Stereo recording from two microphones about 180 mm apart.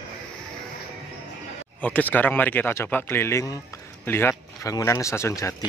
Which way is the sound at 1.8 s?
10° left (ahead or behind).